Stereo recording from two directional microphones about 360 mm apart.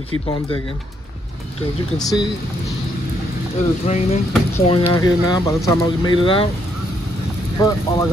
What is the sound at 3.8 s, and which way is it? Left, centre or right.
Speech, centre.